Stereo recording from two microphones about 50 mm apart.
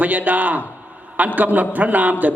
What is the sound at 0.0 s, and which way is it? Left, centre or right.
A man's voice, right.